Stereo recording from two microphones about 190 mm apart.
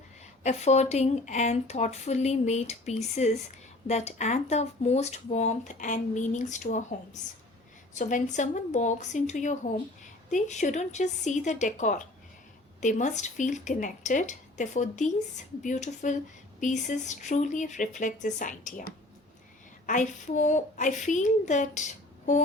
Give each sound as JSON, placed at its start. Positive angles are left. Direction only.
{"t": 0.4, "sound": "speech", "side_deg": 35}